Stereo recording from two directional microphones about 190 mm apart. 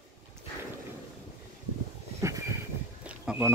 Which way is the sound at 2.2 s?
15° right (ahead or behind).